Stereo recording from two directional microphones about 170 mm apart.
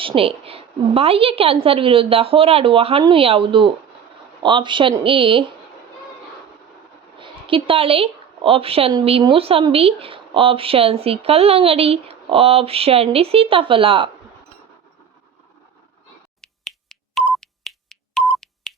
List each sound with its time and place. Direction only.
0.0 s a woman's voice: 30° right (ahead or behind)
7.2 s a woman's voice: 30° right (ahead or behind)
16.4 s finger snapping: centre (ahead or behind)